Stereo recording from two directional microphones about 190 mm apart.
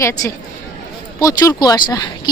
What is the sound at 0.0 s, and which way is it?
Speech, 15° left (ahead or behind).